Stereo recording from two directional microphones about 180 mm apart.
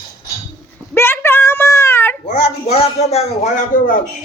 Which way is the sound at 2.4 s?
35° left (ahead or behind).